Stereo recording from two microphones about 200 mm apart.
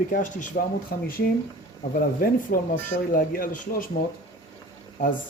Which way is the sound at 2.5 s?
50° left (ahead or behind).